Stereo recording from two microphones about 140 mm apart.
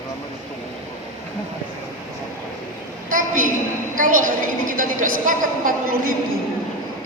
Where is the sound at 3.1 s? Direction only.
70° right (ahead or behind).